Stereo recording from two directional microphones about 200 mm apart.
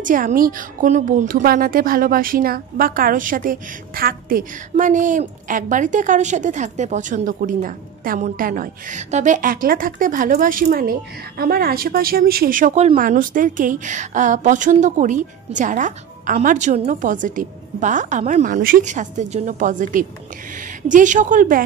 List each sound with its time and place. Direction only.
0.0 s a woman's voice: 45° right (ahead or behind)